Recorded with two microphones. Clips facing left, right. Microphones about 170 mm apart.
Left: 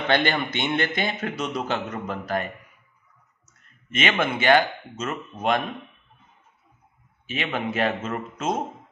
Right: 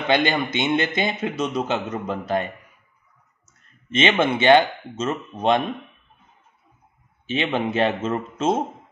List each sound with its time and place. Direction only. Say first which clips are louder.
0.1 s a man's voice: right 3 dB; 15° right (ahead or behind)
3.9 s a man's voice: right 5 dB; 25° right (ahead or behind)
7.2 s a man's voice: right 5 dB; 25° right (ahead or behind)